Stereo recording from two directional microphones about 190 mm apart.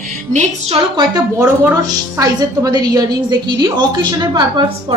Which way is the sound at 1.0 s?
20° right (ahead or behind).